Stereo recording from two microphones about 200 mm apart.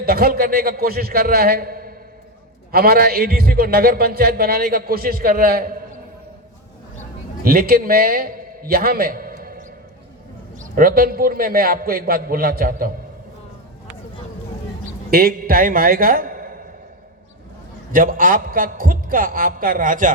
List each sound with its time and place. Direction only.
0.0 s a man's voice: 50° right (ahead or behind)
7.4 s a man's voice: 50° right (ahead or behind)
15.1 s a man's voice: 50° right (ahead or behind)
17.9 s a man's voice: 45° right (ahead or behind)